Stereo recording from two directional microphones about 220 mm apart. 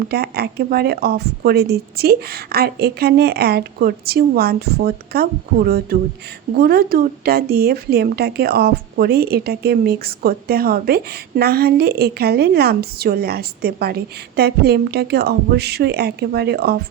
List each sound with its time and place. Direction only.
0.1 s speech: 45° right (ahead or behind)